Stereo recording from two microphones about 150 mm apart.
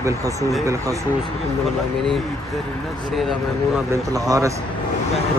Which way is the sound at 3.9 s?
20° right (ahead or behind).